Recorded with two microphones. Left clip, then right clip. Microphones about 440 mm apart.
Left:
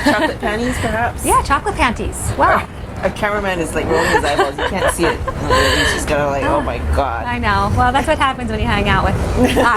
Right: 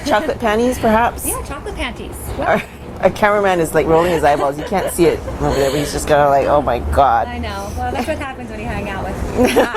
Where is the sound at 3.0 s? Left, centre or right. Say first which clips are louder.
Right 5 dB; right.